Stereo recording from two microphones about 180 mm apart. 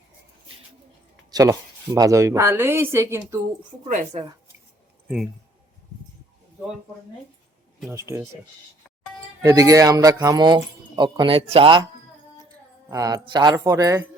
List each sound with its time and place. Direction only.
1.3 s speech: 20° right (ahead or behind)
3.8 s a woman's voice: 40° right (ahead or behind)
5.0 s speech: 5° right (ahead or behind)
7.9 s speech: 15° right (ahead or behind)
9.4 s speech: 20° right (ahead or behind)
12.9 s speech: 20° right (ahead or behind)